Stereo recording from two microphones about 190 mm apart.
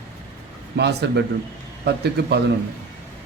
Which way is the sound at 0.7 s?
60° right (ahead or behind).